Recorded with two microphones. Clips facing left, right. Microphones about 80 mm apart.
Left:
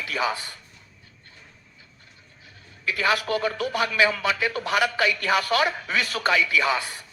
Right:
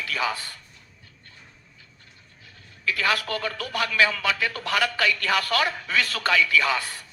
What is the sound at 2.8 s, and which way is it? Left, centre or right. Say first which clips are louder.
Speech: left 1 dB; centre.